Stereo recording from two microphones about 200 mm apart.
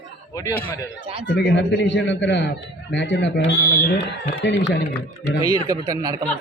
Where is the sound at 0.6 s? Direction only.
10° left (ahead or behind).